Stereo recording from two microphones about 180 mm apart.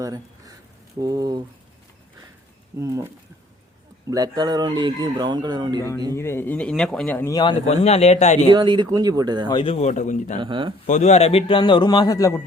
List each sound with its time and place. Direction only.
0.0 s a sound: 20° right (ahead or behind)
0.9 s speech: 20° right (ahead or behind)
2.7 s speech: 15° right (ahead or behind)
4.1 s speech: 20° right (ahead or behind)
6.1 s speech: 15° left (ahead or behind)
7.7 s a man's voice: 35° left (ahead or behind)
8.5 s speech: 25° right (ahead or behind)
9.5 s a man's voice: 30° left (ahead or behind)
10.4 s speech: 25° right (ahead or behind)
10.8 s a man's voice: 40° left (ahead or behind); by 12.4 s 20° left (ahead or behind)